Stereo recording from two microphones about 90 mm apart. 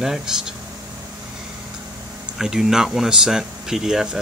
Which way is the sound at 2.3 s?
5° right (ahead or behind).